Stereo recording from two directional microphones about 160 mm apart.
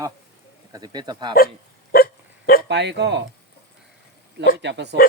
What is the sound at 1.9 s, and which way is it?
Hiccup, 70° left (ahead or behind).